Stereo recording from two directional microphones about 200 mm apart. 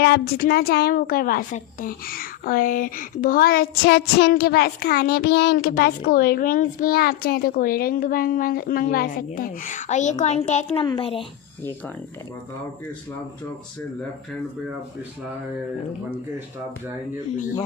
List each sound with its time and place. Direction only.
0.0 s a woman's voice: 50° left (ahead or behind); by 11.3 s 25° left (ahead or behind)